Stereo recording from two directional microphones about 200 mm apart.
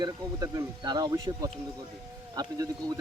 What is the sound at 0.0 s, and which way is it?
Speech, 15° right (ahead or behind).